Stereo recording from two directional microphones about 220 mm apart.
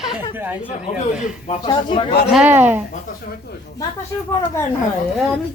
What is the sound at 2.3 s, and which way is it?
Speech, 10° right (ahead or behind).